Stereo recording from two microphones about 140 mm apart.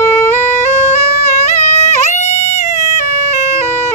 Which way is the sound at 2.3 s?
50° left (ahead or behind).